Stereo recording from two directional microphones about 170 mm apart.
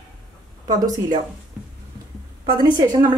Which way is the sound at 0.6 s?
20° right (ahead or behind).